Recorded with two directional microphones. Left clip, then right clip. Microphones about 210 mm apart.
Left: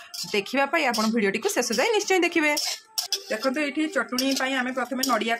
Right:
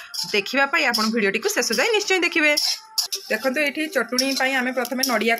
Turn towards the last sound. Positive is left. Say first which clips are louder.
# right 4 dB
turn(degrees=-20)  # may be behind; listen again after turning